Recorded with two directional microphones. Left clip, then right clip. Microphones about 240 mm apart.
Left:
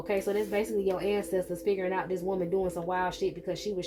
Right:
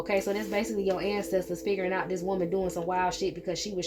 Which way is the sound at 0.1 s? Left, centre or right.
Right.